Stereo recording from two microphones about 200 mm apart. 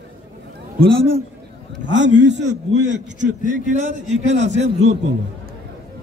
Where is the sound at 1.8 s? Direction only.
65° right (ahead or behind).